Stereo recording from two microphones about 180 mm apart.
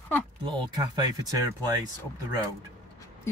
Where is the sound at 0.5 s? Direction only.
25° right (ahead or behind).